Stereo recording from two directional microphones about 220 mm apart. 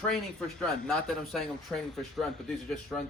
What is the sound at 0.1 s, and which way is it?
Speech, centre (ahead or behind).